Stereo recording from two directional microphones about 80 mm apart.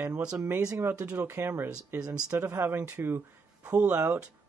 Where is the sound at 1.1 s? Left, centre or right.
Right.